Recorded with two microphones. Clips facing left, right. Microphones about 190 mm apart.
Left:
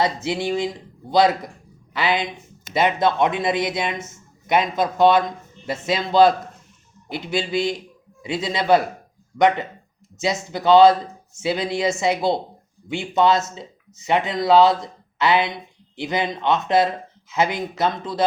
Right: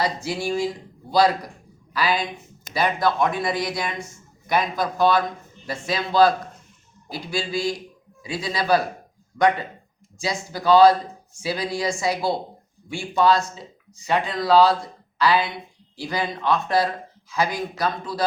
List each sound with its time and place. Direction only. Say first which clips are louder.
0.0 s speech: left 3 dB; 20° left (ahead or behind)
10.2 s speech: left 4 dB; 20° left (ahead or behind)